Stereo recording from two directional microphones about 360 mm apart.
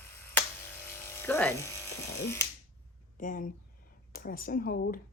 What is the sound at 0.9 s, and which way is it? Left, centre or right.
Electric shaver, centre.